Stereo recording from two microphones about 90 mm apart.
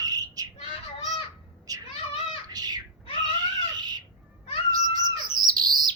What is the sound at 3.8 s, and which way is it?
Bird, 50° right (ahead or behind).